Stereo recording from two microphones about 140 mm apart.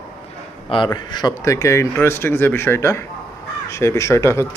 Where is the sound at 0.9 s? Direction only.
30° left (ahead or behind).